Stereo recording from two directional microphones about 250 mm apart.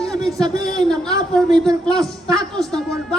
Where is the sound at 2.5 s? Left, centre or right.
Centre.